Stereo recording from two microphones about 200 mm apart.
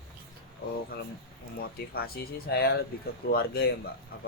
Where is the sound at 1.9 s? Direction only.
50° left (ahead or behind).